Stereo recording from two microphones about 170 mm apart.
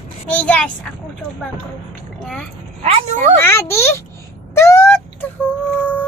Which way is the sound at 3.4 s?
15° left (ahead or behind).